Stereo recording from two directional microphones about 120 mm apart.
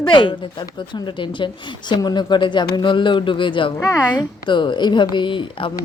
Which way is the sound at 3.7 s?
25° left (ahead or behind).